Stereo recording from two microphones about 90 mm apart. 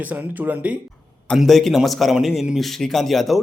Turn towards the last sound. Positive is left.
turn(degrees=0)  # may be behind; listen again after turning